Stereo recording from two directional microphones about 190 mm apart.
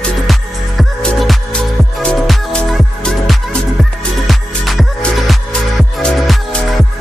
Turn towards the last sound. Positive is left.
turn(degrees=0)  # may be behind; listen again after turning